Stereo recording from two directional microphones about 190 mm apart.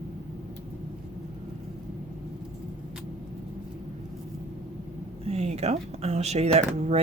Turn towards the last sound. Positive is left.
turn(degrees=-35)  # may be behind; listen again after turning